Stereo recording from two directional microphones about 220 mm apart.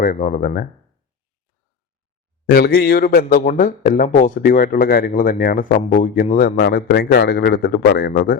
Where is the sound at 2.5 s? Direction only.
45° left (ahead or behind).